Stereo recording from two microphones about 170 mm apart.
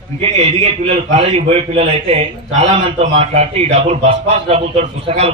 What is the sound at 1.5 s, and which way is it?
A man's voice, 35° right (ahead or behind).